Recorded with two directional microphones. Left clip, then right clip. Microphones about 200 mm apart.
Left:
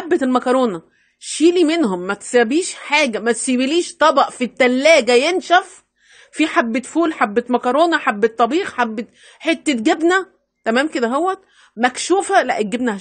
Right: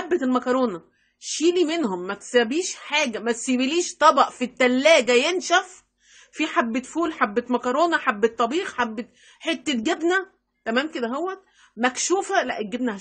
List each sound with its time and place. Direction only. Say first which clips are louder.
0.1 s a woman's voice: left 7 dB; 35° left (ahead or behind)
11.8 s a woman's voice: left 6 dB; 30° left (ahead or behind)